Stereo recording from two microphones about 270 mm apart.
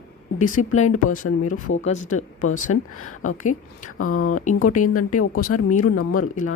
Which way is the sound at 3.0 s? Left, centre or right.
Left.